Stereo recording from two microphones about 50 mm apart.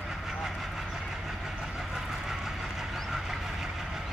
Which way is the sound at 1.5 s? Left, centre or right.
Centre.